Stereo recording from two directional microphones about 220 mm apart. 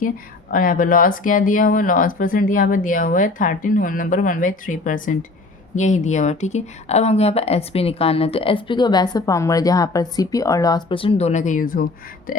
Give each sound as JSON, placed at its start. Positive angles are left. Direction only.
{"t": 0.5, "sound": "a woman's voice", "side_deg": 40}